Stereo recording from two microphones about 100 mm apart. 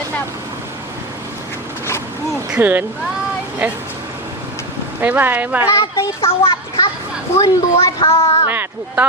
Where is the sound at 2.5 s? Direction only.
20° right (ahead or behind).